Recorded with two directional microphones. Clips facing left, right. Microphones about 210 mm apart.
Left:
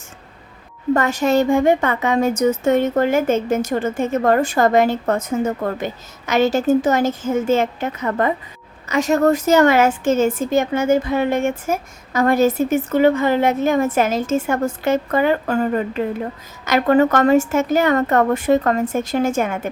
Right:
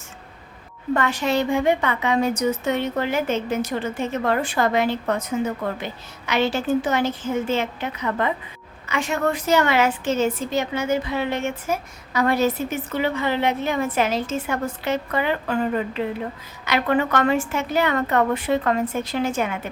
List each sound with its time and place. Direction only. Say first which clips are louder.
0.9 s a woman's voice: left 5 dB; 45° left (ahead or behind)